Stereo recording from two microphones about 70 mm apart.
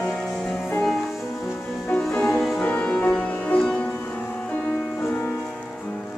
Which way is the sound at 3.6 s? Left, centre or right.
Centre.